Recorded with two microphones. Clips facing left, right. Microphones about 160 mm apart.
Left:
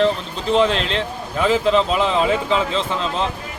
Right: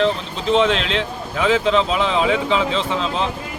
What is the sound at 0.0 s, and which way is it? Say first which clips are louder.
A man's voice: left 1 dB; centre (ahead or behind).